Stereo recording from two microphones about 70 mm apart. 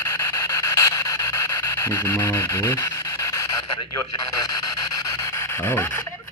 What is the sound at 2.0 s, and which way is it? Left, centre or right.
Speech, left.